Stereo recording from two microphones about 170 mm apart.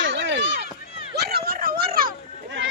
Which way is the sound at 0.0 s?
90° right.